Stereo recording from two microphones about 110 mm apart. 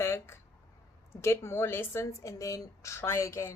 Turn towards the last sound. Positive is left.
turn(degrees=25)  # may be behind; listen again after turning